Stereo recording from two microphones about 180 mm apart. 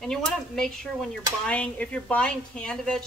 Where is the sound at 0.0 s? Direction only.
5° left (ahead or behind).